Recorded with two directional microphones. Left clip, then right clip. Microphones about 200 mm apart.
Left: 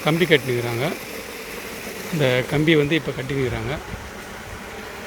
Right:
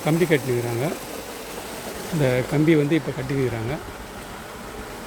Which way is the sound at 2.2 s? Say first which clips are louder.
Left 1 dB; 5° right (ahead or behind).